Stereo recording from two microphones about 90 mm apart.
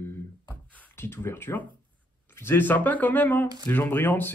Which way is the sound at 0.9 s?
25° left (ahead or behind).